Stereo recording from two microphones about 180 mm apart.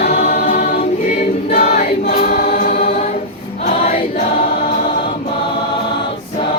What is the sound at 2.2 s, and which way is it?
Choir, 55° left (ahead or behind).